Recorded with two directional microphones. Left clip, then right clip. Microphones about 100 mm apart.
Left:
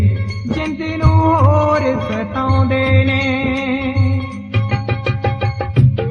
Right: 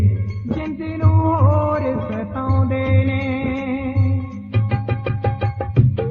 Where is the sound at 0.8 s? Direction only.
55° left (ahead or behind).